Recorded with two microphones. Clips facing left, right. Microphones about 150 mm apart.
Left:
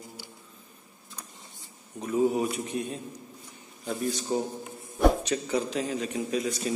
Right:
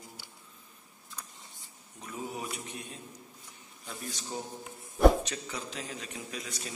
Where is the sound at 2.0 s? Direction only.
55° left (ahead or behind).